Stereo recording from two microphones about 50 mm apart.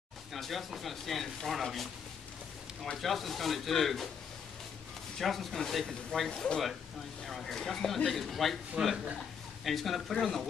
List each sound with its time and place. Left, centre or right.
0.3 s speech: centre
5.2 s speech: centre
8.8 s a man's voice: centre
9.7 s speech: centre